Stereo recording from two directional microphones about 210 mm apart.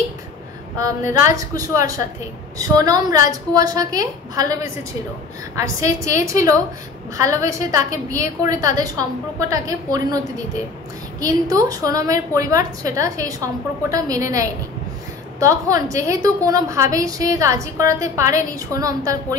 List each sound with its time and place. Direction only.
1.3 s a woman's voice: 15° right (ahead or behind)
5.6 s a woman's voice: 15° right (ahead or behind)